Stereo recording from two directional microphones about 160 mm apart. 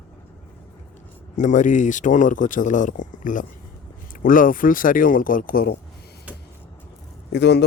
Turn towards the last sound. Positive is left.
turn(degrees=90)